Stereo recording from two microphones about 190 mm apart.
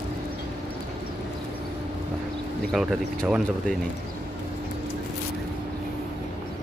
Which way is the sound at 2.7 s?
Centre (ahead or behind).